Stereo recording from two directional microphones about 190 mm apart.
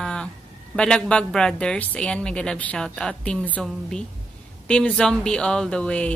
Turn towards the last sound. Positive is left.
turn(degrees=5)  # may be behind; listen again after turning